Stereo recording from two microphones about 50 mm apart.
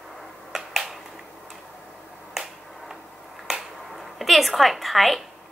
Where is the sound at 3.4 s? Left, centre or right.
Centre.